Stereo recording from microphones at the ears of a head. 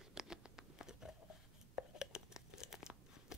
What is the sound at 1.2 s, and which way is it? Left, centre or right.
Tearing, left.